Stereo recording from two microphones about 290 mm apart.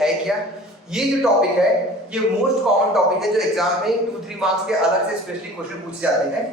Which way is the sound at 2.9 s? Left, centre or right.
Centre.